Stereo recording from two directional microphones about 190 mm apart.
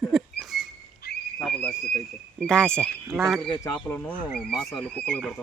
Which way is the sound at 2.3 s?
5° left (ahead or behind).